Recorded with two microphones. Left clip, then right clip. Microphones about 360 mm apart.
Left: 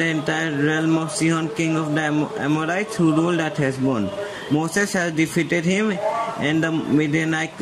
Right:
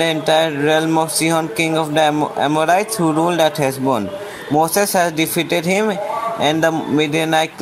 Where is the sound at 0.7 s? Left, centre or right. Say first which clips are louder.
Right 3 dB; right.